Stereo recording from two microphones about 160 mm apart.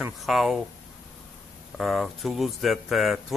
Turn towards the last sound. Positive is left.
turn(degrees=0)  # may be behind; listen again after turning